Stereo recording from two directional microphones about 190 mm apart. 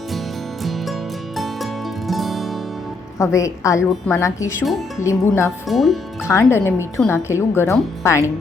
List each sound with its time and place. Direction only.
2.0 s music: centre (ahead or behind)
3.2 s speech: 15° left (ahead or behind)
5.6 s speech: centre (ahead or behind)
6.2 s speech: 15° left (ahead or behind)